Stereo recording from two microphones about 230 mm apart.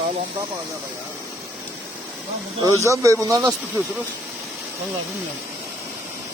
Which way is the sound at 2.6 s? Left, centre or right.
Centre.